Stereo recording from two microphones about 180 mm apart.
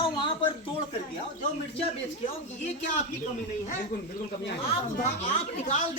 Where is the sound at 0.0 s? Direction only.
30° left (ahead or behind).